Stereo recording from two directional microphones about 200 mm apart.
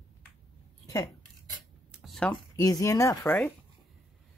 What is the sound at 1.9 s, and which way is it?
Speech, centre (ahead or behind).